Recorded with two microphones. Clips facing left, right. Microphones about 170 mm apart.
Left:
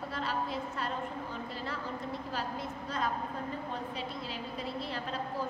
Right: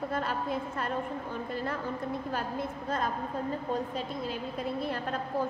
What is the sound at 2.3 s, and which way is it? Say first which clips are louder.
A woman's voice: right 4 dB; 55° right (ahead or behind).